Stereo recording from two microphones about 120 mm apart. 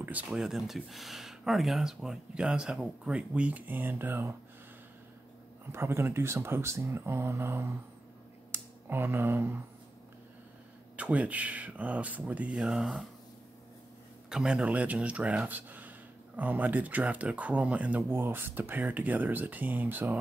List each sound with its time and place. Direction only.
0.3 s speech: 5° right (ahead or behind)
5.7 s speech: 20° right (ahead or behind)
8.5 s finger snapping: 20° right (ahead or behind)
11.0 s speech: 10° right (ahead or behind)
14.3 s speech: 5° right (ahead or behind)